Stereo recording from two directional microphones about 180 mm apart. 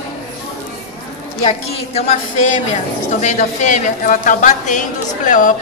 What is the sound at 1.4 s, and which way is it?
A woman's voice, 35° left (ahead or behind).